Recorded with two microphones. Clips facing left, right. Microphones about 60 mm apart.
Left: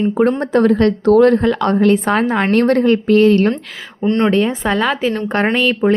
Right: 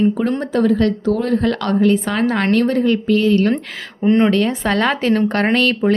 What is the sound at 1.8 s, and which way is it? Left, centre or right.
Speech, left.